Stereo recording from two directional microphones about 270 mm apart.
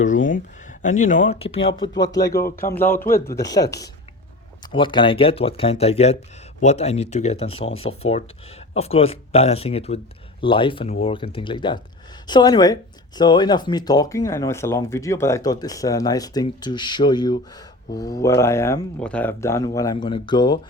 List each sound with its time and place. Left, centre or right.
0.0 s speech: left; by 2.9 s centre
3.1 s speech: left
3.3 s speech: centre